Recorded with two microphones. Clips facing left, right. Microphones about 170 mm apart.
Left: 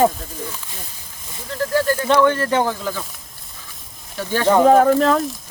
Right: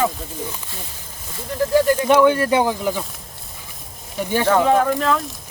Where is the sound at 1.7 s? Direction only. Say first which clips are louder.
Right 2 dB; 15° right (ahead or behind).